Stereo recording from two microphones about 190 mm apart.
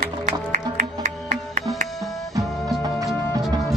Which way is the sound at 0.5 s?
40° right (ahead or behind).